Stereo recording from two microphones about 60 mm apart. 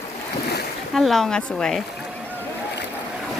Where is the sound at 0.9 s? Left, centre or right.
Centre.